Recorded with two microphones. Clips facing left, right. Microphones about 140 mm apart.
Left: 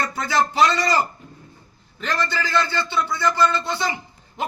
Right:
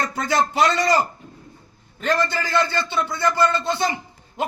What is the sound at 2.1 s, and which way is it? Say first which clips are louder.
Speech: even; 20° right (ahead or behind).